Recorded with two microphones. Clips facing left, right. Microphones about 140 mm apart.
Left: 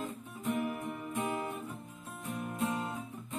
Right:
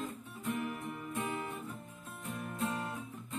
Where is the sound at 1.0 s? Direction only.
25° left (ahead or behind).